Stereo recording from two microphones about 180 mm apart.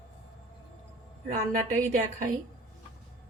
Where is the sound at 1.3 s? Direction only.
45° right (ahead or behind).